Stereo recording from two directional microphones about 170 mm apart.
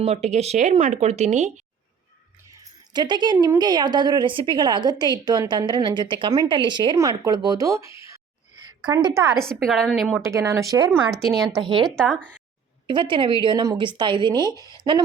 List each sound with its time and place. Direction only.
0.0 s speech: 40° right (ahead or behind)
2.5 s speech: 25° right (ahead or behind)
9.4 s a woman's voice: 5° left (ahead or behind)
10.2 s speech: 15° right (ahead or behind)
11.1 s a woman's voice: centre (ahead or behind)
11.6 s speech: 30° right (ahead or behind)
11.9 s a woman's voice: centre (ahead or behind)
12.9 s speech: 30° right (ahead or behind)
14.3 s speech: 20° left (ahead or behind)
14.8 s speech: 30° right (ahead or behind)